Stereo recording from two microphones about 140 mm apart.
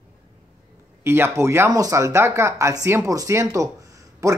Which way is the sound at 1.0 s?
15° right (ahead or behind).